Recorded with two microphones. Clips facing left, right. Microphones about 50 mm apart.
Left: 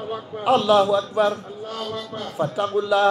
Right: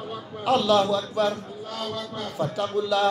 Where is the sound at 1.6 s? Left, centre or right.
Left.